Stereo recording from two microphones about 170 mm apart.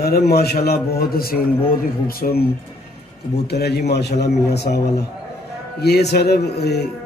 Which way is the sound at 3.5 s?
75° left (ahead or behind).